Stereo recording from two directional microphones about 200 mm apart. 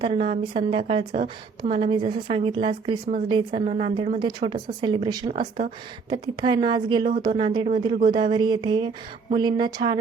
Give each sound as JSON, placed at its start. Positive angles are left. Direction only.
{"t": 0.0, "sound": "a woman's voice", "side_deg": -30}
{"t": 5.3, "sound": "speech", "side_deg": -35}
{"t": 6.1, "sound": "a woman's voice", "side_deg": -20}